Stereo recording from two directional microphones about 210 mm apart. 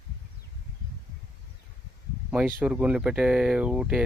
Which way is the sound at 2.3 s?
5° right (ahead or behind).